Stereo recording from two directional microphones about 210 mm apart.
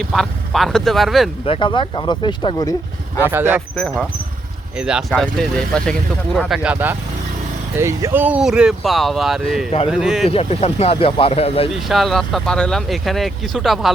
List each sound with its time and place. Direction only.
0.0 s speech: centre (ahead or behind)
1.5 s speech: 25° left (ahead or behind)
3.2 s speech: 10° right (ahead or behind)
3.8 s speech: centre (ahead or behind)
10.2 s speech: 30° left (ahead or behind)
11.7 s speech: centre (ahead or behind)